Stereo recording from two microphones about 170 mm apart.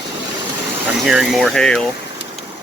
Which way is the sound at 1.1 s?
5° right (ahead or behind).